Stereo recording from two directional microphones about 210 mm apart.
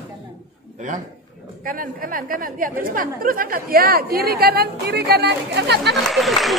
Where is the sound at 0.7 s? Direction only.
35° right (ahead or behind).